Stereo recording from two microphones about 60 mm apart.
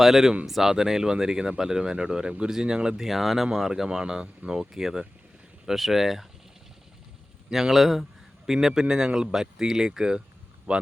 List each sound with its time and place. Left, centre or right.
0.0 s speech: centre
7.5 s speech: centre
10.7 s speech: right